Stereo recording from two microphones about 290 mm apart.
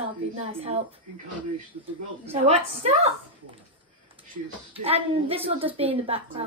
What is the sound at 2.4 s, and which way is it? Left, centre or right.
Speech, right.